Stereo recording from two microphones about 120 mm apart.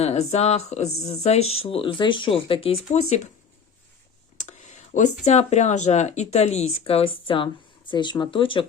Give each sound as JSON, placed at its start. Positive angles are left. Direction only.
{"t": 0.0, "sound": "speech", "side_deg": 65}
{"t": 4.4, "sound": "a sound", "side_deg": 80}
{"t": 5.2, "sound": "speech", "side_deg": 70}